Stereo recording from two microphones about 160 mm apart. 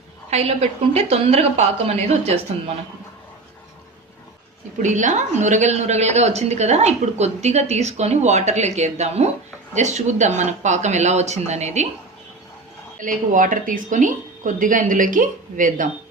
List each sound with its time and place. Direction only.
0.3 s a woman's voice: 40° right (ahead or behind)
4.8 s speech: 50° right (ahead or behind)
13.0 s speech: 55° right (ahead or behind)